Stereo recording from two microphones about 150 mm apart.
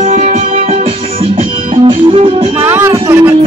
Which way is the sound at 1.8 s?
35° right (ahead or behind).